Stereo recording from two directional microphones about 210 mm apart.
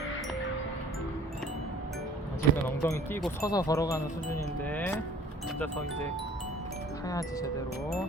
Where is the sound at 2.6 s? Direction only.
10° left (ahead or behind).